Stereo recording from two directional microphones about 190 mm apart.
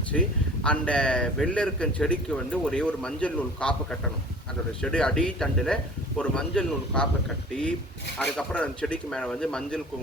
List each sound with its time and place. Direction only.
0.1 s a man's voice: 5° left (ahead or behind)
8.2 s a man's voice: 5° left (ahead or behind)